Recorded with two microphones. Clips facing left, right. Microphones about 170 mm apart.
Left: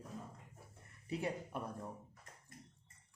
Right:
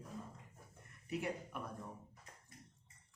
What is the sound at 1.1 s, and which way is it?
Speech, 30° left (ahead or behind).